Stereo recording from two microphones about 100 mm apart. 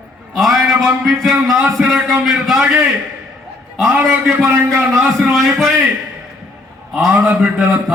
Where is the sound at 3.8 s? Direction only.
10° right (ahead or behind).